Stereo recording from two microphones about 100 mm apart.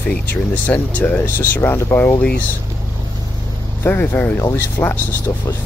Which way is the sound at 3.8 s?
20° left (ahead or behind).